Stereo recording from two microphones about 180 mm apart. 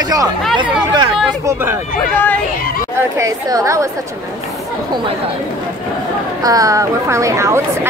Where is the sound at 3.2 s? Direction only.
20° right (ahead or behind).